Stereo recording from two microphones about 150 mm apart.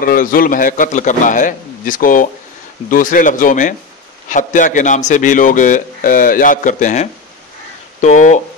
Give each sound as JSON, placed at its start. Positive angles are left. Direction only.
{"t": 0.0, "sound": "a man's voice", "side_deg": 70}